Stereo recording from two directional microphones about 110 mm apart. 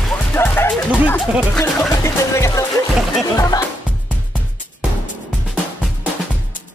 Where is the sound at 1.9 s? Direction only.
25° left (ahead or behind).